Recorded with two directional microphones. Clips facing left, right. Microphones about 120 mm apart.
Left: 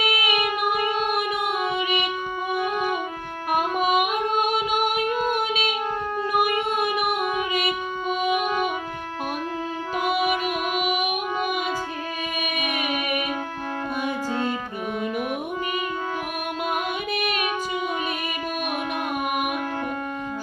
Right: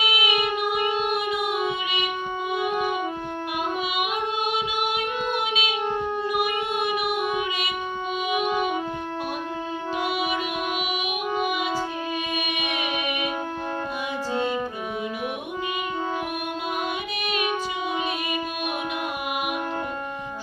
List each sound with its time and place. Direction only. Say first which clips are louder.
0.0 s child singing: left 1 dB; 25° right (ahead or behind)
3.5 s music: left 8 dB; 45° left (ahead or behind)
10.8 s music: left 4 dB; 45° left (ahead or behind)